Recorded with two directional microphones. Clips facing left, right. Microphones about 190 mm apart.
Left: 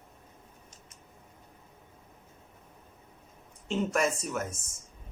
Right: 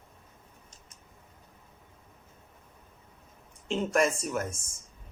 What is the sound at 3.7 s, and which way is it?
Speech, 5° left (ahead or behind).